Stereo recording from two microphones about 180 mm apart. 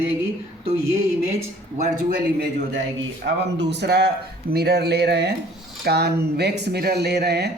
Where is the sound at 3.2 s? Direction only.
75° right (ahead or behind).